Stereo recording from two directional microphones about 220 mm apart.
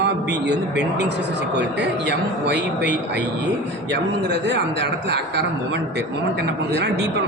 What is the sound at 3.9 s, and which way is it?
Speech, 50° right (ahead or behind).